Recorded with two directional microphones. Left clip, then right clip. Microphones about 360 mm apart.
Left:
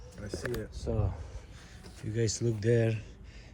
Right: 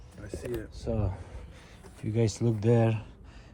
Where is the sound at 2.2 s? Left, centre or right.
Centre.